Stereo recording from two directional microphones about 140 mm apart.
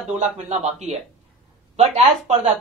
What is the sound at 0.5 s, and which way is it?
Speech, 50° right (ahead or behind).